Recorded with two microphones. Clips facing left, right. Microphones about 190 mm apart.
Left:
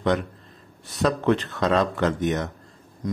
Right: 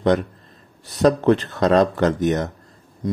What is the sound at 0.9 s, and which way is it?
Speech, 40° right (ahead or behind).